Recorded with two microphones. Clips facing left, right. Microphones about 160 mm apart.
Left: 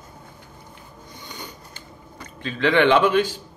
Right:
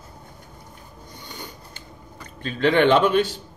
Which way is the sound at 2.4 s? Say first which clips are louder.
Even; 45° right (ahead or behind).